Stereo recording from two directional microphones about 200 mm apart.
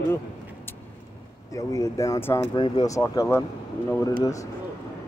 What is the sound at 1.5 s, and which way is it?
Speech, 15° left (ahead or behind).